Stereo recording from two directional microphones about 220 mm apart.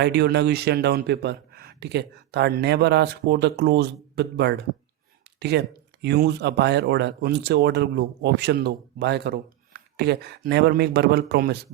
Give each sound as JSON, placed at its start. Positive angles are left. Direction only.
{"t": 0.0, "sound": "speech", "side_deg": -50}